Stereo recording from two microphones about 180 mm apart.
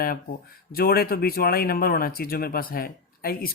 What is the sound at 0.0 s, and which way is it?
Speech, 55° left (ahead or behind).